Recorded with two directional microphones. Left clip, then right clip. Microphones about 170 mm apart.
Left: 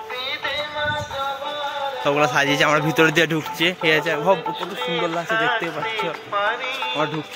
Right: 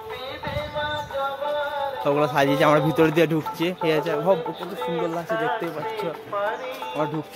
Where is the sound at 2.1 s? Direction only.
10° right (ahead or behind).